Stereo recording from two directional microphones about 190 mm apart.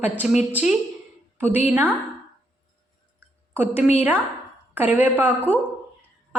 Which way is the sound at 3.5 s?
10° right (ahead or behind).